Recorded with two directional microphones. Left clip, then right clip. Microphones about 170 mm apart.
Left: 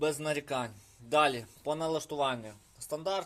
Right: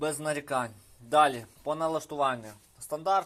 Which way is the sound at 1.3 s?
20° left (ahead or behind).